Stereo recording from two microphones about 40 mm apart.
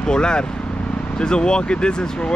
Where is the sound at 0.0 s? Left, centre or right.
Centre.